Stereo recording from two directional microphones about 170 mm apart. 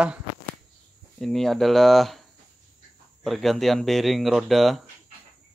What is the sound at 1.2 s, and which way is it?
Speech, centre (ahead or behind).